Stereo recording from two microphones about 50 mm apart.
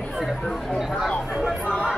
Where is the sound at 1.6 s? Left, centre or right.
Right.